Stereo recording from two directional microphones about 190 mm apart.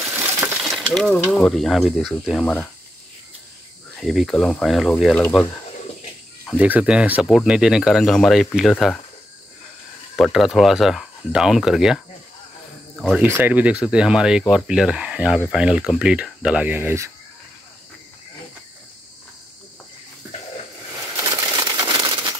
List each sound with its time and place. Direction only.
0.6 s speech: centre (ahead or behind)
3.9 s speech: centre (ahead or behind)
6.6 s speech: 5° right (ahead or behind)
10.1 s speech: centre (ahead or behind)
13.0 s speech: centre (ahead or behind)
21.2 s a sound: 20° right (ahead or behind)